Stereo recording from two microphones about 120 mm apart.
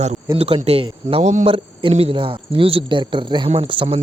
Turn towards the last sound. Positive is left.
turn(degrees=-45)  # may be behind; listen again after turning